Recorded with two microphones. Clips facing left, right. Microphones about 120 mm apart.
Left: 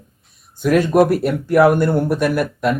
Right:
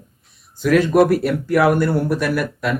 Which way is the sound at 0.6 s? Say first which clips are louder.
Even; 15° left (ahead or behind).